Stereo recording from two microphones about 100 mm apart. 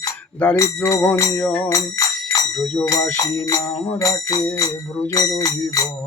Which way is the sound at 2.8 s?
35° left (ahead or behind).